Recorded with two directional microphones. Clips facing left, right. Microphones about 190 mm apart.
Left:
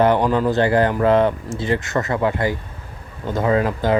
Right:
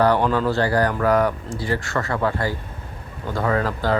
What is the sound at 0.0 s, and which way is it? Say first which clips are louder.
Speech: left 2 dB; 20° left (ahead or behind).